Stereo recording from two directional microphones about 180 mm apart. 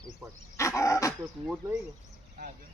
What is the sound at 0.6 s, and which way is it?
Dog, 15° left (ahead or behind).